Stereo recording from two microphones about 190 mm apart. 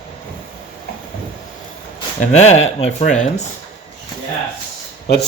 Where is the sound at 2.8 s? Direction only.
40° left (ahead or behind).